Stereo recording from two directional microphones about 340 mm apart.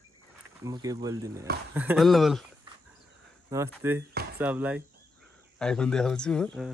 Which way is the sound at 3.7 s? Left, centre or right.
Centre.